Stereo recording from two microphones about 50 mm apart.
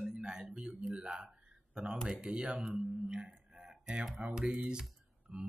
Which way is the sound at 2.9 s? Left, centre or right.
Centre.